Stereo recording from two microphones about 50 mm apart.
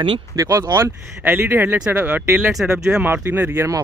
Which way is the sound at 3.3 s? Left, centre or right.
Right.